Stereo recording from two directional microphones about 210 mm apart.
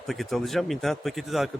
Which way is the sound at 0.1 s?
Centre (ahead or behind).